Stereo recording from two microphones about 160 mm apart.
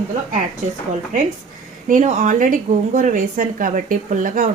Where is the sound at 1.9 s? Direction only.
50° right (ahead or behind).